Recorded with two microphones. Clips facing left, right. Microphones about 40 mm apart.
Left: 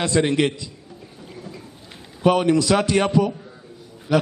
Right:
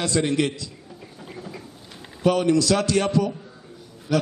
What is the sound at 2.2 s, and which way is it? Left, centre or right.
A man's voice, left.